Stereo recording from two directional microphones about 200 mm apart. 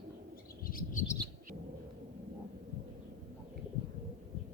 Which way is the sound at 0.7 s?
45° left (ahead or behind).